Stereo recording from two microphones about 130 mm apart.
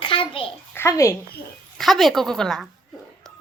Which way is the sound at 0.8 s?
20° left (ahead or behind).